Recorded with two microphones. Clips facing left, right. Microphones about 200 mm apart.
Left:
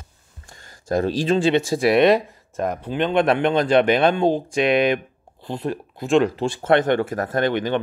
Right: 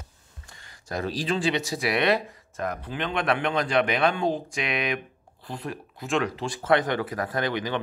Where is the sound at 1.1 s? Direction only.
25° left (ahead or behind).